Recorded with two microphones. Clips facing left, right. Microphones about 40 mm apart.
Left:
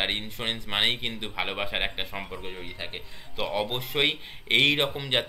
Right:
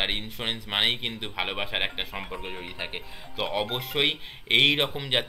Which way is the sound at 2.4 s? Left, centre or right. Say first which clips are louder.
Right 2 dB; centre.